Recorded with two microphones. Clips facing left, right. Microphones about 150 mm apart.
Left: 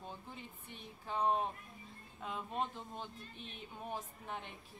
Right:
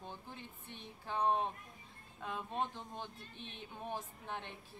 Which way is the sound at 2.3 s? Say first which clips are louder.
Even; 15° right (ahead or behind).